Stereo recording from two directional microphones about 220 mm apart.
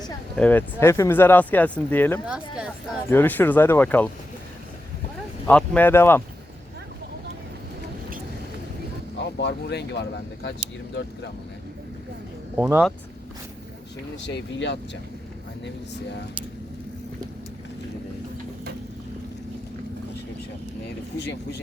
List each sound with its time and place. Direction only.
0.3 s speech: 5° left (ahead or behind)
2.2 s speech: 5° right (ahead or behind)
3.1 s speech: 10° left (ahead or behind)
5.5 s speech: 5° left (ahead or behind)
9.1 s speech: 50° left (ahead or behind)
12.5 s speech: 5° right (ahead or behind)
14.3 s speech: 55° left (ahead or behind)